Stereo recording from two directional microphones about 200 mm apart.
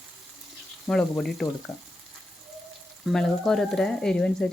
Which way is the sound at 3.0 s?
Centre (ahead or behind).